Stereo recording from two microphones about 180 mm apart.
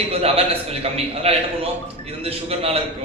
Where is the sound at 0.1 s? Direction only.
35° right (ahead or behind).